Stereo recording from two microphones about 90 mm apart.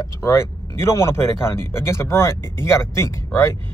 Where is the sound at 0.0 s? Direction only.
30° left (ahead or behind).